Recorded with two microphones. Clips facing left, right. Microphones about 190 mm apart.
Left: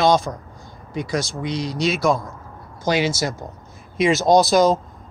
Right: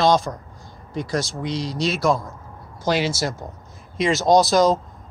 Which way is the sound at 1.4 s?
55° left (ahead or behind).